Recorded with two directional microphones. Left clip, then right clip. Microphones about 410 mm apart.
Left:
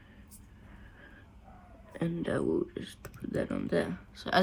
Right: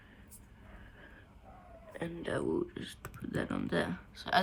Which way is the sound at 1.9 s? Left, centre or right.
Centre.